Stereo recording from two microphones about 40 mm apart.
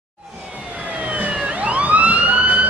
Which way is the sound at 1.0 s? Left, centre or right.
Right.